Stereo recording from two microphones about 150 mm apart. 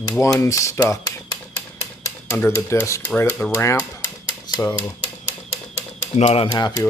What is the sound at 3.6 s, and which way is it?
Speech, 20° left (ahead or behind).